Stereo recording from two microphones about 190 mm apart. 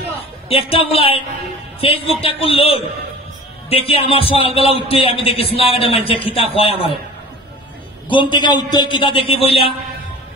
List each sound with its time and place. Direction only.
0.5 s a man's voice: 30° left (ahead or behind)
8.1 s a man's voice: 25° left (ahead or behind)